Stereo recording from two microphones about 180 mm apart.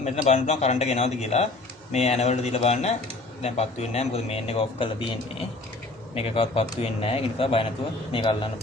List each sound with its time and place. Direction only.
0.0 s a man's voice: 40° left (ahead or behind)